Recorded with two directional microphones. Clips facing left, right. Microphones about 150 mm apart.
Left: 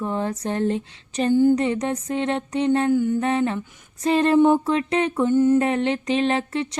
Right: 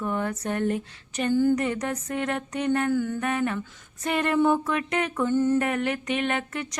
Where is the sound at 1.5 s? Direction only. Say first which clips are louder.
Left 4 dB; 25° left (ahead or behind).